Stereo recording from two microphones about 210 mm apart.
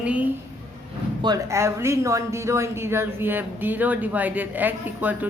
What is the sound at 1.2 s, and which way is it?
Speech, 15° right (ahead or behind).